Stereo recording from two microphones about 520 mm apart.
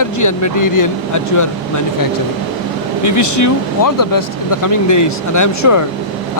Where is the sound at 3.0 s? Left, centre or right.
Left.